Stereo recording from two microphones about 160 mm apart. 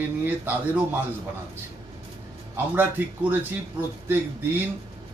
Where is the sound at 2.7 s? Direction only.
10° right (ahead or behind).